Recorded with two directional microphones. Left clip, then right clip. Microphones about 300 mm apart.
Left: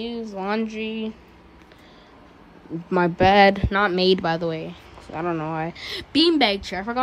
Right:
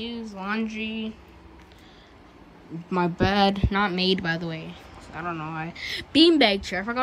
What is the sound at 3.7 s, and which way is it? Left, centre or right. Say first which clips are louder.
A woman's voice: left 5 dB; centre.